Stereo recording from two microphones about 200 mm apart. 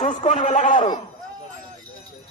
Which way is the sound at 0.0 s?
35° left (ahead or behind).